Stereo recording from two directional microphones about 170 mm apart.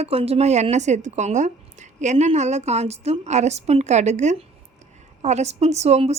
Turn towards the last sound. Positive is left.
turn(degrees=-40)  # may be behind; listen again after turning